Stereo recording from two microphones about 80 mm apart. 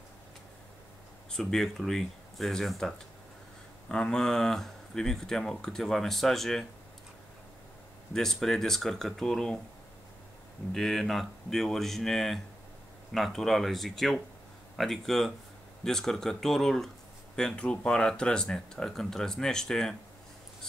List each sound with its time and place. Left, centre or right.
1.3 s speech: centre
3.9 s speech: centre
8.1 s speech: centre
10.7 s speech: centre